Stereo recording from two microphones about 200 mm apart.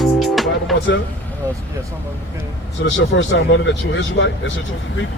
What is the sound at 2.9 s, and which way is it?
Speech, 70° left (ahead or behind).